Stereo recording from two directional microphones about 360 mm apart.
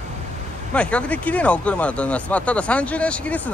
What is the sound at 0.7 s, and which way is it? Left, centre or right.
Speech, centre.